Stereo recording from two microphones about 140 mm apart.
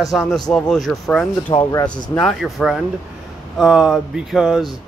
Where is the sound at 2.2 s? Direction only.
Centre (ahead or behind).